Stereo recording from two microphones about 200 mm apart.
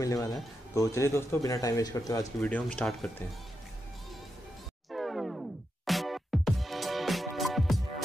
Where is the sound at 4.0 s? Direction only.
Centre (ahead or behind).